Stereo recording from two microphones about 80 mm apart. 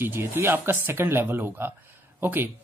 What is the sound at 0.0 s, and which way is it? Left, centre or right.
A man's voice, right.